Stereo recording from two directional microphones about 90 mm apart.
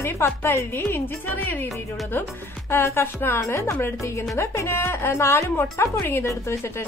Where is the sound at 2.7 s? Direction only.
30° left (ahead or behind).